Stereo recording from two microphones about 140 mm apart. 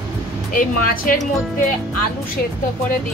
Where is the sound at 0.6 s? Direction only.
70° left (ahead or behind).